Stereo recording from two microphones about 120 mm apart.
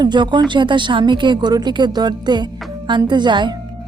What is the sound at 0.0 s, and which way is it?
Speech, 40° right (ahead or behind).